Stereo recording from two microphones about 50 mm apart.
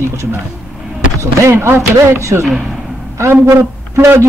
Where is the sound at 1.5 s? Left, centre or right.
Right.